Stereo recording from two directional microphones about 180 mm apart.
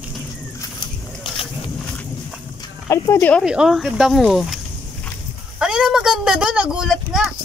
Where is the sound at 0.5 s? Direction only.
25° left (ahead or behind).